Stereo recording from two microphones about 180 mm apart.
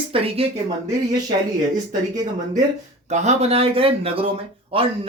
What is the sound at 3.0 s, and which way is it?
Speech, 40° right (ahead or behind).